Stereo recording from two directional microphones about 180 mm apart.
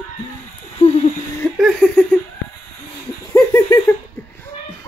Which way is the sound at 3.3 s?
20° left (ahead or behind).